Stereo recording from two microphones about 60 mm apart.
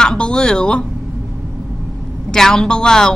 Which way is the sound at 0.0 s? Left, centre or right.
Centre.